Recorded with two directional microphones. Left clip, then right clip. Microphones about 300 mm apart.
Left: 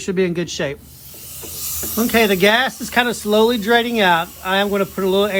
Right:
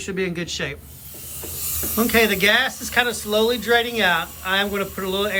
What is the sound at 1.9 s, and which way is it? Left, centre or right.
Speech, centre.